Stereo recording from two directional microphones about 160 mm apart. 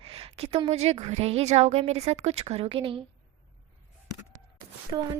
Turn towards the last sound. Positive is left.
turn(degrees=-30)  # may be behind; listen again after turning